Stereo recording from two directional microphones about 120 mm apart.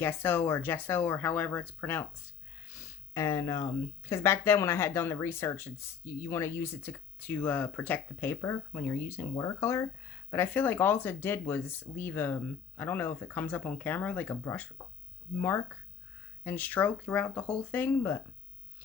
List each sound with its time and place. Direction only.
0.0 s speech: 20° left (ahead or behind)